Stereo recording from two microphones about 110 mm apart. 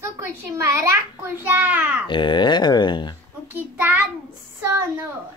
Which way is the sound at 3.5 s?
15° right (ahead or behind).